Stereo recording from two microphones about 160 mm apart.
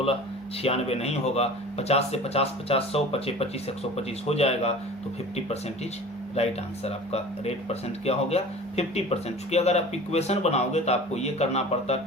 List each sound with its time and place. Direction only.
0.6 s speech: 40° left (ahead or behind)
6.3 s speech: 40° left (ahead or behind)